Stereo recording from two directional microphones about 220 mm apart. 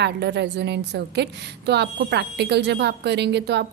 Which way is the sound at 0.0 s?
50° right (ahead or behind).